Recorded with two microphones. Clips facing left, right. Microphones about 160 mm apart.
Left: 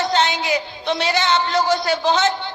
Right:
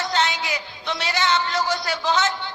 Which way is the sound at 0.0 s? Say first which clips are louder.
Left 4 dB; 25° left (ahead or behind).